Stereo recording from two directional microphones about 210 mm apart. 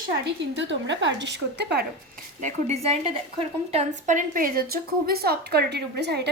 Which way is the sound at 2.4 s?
30° right (ahead or behind).